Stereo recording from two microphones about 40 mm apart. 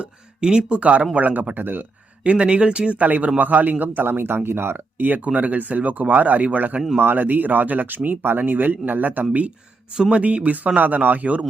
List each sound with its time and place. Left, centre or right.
0.3 s speech: centre
0.7 s speech: right
1.1 s speech: right
2.2 s speech: right
3.1 s speech: right
4.4 s speech: right
5.0 s speech: right
10.2 s speech: right